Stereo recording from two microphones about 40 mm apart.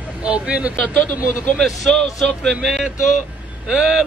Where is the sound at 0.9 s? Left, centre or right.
Left.